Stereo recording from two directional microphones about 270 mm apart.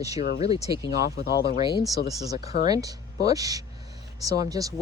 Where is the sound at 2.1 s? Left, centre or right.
Centre.